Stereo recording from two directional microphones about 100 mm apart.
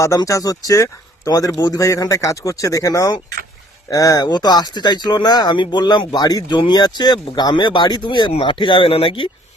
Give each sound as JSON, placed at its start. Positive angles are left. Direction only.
{"t": 0.3, "sound": "speech", "side_deg": 35}